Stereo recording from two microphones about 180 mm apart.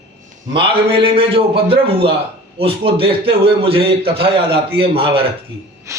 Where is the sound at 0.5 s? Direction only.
30° right (ahead or behind).